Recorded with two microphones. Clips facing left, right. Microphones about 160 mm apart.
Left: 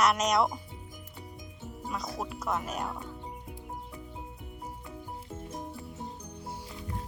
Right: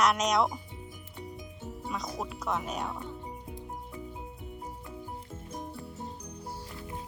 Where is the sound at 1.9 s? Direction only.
Centre (ahead or behind).